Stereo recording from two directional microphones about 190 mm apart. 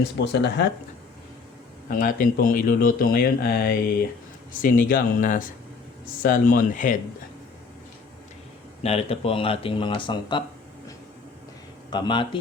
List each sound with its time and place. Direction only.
0.2 s speech: 65° left (ahead or behind)
1.9 s speech: 45° left (ahead or behind)
8.8 s speech: 30° left (ahead or behind)
11.9 s speech: 25° left (ahead or behind)